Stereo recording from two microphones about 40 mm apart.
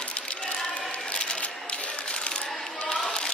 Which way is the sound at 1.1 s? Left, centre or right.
Left.